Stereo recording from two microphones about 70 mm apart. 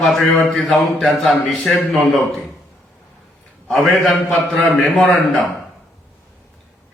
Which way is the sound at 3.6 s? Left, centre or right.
Centre.